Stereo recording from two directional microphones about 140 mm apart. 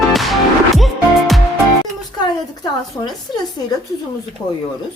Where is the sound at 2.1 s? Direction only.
30° left (ahead or behind).